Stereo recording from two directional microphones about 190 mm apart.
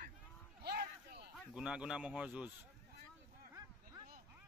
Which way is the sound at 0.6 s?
60° right (ahead or behind).